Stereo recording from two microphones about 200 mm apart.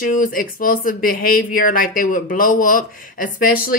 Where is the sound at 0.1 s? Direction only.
45° left (ahead or behind).